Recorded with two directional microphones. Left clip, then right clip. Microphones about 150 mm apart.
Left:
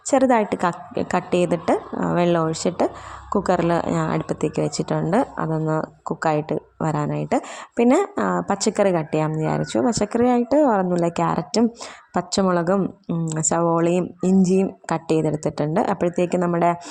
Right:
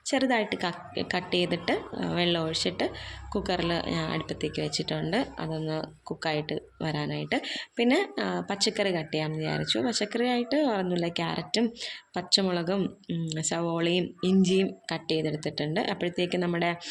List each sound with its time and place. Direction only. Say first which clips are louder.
0.1 s speech: left 9 dB; 55° left (ahead or behind)
1.7 s speech: left 8 dB; 35° left (ahead or behind)
2.1 s a woman's voice: left 7 dB; 55° left (ahead or behind)
13.2 s speech: left 10 dB; 60° left (ahead or behind)